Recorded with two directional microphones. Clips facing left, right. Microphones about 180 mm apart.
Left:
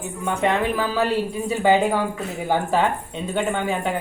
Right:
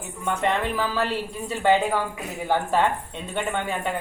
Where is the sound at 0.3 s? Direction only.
5° left (ahead or behind).